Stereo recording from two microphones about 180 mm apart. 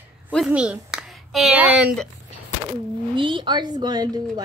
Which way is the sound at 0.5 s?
5° right (ahead or behind).